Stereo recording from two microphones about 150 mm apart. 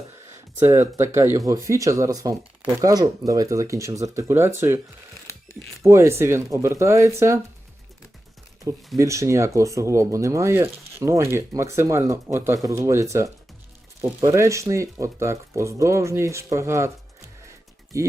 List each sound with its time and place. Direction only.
0.6 s speech: 20° right (ahead or behind)
5.8 s speech: 20° right (ahead or behind)
9.0 s speech: 20° right (ahead or behind)